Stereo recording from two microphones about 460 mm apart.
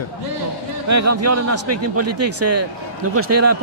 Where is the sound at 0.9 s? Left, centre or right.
Right.